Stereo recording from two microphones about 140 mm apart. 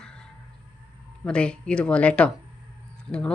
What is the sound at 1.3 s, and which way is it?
Speech, 5° left (ahead or behind).